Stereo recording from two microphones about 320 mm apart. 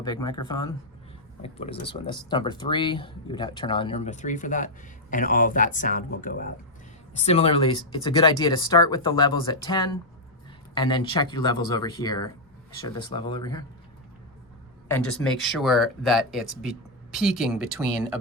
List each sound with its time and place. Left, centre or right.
0.0 s speech: centre
14.8 s speech: centre